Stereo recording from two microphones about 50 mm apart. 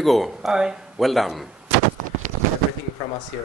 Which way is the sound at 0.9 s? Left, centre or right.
Centre.